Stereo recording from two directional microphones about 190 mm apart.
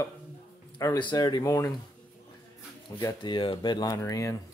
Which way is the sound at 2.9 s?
25° left (ahead or behind).